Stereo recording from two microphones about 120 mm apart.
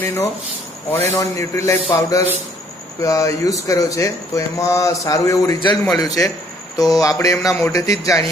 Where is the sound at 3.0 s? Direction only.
25° left (ahead or behind).